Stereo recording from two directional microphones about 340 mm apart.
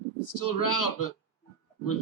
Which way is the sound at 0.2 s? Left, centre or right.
Left.